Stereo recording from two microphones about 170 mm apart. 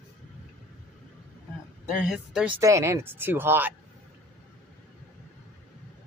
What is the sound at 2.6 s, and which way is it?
Speech, 15° right (ahead or behind).